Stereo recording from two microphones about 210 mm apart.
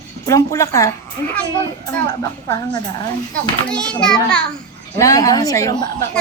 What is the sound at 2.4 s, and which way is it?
Speech, 20° left (ahead or behind).